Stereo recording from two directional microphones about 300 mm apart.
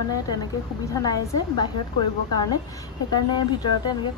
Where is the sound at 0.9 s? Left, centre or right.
Centre.